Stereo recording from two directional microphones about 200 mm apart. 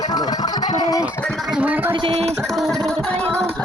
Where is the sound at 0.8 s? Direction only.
20° left (ahead or behind).